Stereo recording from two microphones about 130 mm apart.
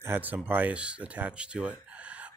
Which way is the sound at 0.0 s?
15° right (ahead or behind).